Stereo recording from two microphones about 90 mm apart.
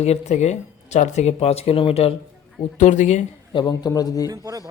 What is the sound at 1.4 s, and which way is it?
Speech, 90° left.